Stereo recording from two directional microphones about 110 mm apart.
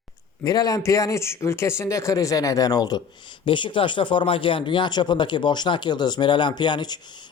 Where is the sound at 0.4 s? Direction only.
35° left (ahead or behind).